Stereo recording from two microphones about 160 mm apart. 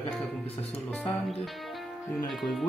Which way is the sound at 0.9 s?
5° left (ahead or behind).